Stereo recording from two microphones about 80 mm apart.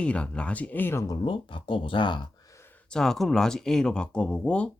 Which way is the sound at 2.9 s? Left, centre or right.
Centre.